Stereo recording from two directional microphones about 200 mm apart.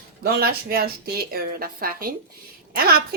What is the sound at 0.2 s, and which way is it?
A woman's voice, 50° right (ahead or behind).